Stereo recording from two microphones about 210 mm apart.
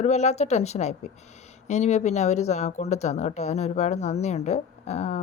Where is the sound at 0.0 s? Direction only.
30° left (ahead or behind).